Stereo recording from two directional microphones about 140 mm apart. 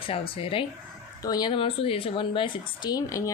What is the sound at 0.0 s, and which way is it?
Speech, 40° left (ahead or behind).